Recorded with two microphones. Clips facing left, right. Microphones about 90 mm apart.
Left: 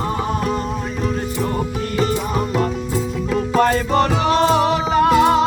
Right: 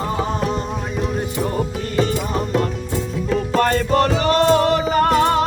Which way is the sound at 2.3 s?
5° left (ahead or behind).